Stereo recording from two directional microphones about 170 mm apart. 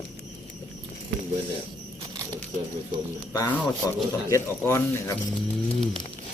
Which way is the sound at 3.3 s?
20° left (ahead or behind).